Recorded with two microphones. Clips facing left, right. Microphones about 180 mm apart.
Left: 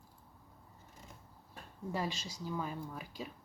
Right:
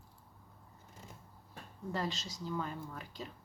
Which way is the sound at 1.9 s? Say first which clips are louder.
Even; 10° left (ahead or behind).